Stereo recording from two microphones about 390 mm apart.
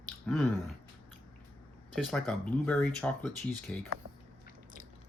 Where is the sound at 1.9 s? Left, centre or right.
Centre.